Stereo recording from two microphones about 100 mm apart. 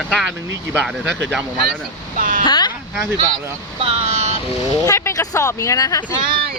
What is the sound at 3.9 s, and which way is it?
Speech, 90° right.